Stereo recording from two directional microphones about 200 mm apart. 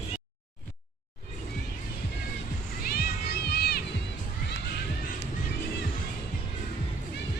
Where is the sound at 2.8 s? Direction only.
50° left (ahead or behind).